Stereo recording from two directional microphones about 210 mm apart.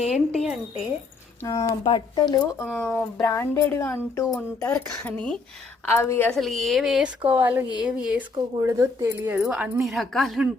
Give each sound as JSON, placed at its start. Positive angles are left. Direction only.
{"t": 0.1, "sound": "a woman's voice", "side_deg": 0}
{"t": 1.5, "sound": "speech", "side_deg": 15}
{"t": 2.7, "sound": "a woman's voice", "side_deg": 5}